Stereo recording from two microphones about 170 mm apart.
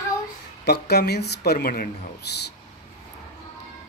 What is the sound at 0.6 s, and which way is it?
Speech, 75° left (ahead or behind).